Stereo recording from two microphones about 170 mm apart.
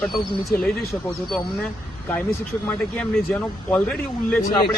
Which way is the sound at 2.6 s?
5° left (ahead or behind).